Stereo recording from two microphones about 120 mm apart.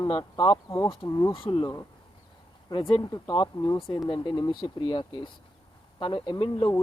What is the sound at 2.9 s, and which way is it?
Speech, 45° left (ahead or behind).